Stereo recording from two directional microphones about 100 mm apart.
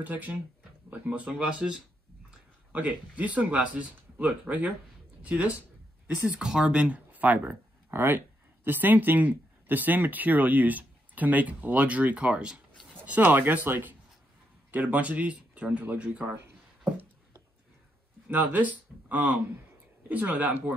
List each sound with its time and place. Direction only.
0.0 s speech: 15° right (ahead or behind)
18.3 s speech: 15° right (ahead or behind)